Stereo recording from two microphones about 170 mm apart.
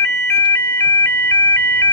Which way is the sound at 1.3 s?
25° left (ahead or behind).